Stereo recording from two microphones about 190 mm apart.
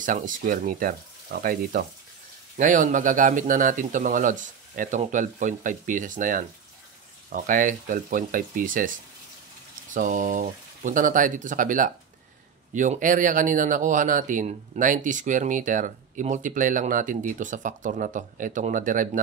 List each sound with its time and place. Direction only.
0.0 s speech: 45° right (ahead or behind)
9.9 s speech: 40° right (ahead or behind)